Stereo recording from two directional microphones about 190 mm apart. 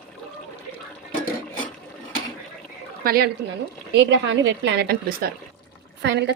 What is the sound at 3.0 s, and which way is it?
Speech, 55° right (ahead or behind).